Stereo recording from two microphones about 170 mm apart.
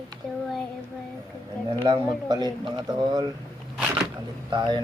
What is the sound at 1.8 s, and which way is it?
Speech, 25° right (ahead or behind).